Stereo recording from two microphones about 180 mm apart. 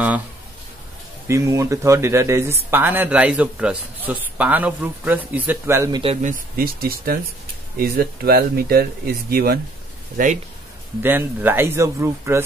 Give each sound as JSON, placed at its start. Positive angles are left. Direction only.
{"t": 1.2, "sound": "speech", "side_deg": -15}
{"t": 6.2, "sound": "speech", "side_deg": -50}
{"t": 10.1, "sound": "speech", "side_deg": -45}
{"t": 11.0, "sound": "speech", "side_deg": -10}